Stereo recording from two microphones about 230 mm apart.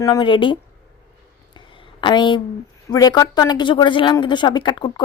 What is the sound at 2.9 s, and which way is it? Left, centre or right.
A woman's voice, centre.